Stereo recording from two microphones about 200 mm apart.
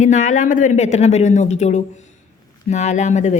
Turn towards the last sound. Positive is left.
turn(degrees=35)  # may be behind; listen again after turning